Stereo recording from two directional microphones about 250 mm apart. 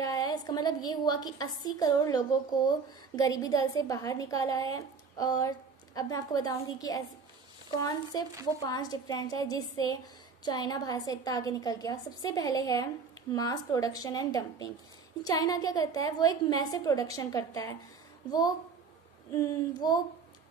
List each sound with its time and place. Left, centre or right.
0.0 s a woman's voice: centre
19.3 s a woman's voice: centre